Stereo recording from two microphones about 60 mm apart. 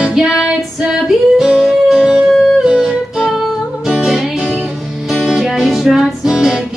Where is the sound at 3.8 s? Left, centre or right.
Centre.